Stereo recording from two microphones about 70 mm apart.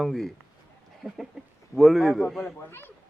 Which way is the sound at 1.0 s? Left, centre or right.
Right.